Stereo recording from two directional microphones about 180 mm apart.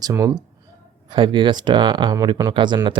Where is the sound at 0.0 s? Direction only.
20° right (ahead or behind).